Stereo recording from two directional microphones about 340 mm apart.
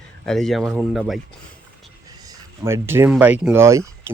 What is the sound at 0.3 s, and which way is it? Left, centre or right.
Speech, centre.